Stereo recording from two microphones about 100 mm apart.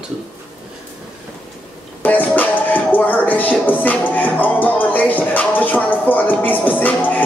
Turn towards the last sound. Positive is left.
turn(degrees=15)  # may be behind; listen again after turning